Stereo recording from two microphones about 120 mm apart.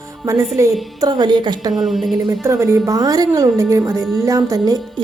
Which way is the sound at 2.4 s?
20° right (ahead or behind).